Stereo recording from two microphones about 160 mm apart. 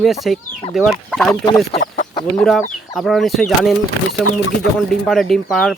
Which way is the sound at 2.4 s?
Centre (ahead or behind).